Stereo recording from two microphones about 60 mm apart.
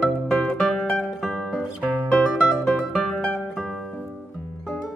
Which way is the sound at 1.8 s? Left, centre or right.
Right.